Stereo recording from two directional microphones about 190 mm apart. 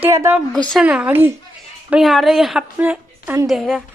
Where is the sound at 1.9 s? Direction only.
Centre (ahead or behind).